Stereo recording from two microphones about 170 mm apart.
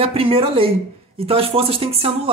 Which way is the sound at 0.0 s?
35° right (ahead or behind).